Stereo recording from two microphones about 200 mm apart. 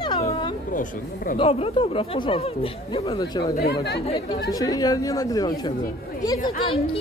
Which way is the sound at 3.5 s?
55° left (ahead or behind).